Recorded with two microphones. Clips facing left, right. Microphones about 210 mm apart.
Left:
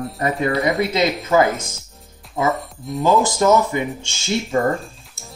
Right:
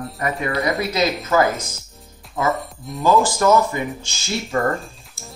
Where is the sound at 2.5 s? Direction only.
Centre (ahead or behind).